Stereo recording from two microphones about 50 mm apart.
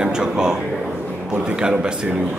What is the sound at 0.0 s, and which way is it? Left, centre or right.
Speech, centre.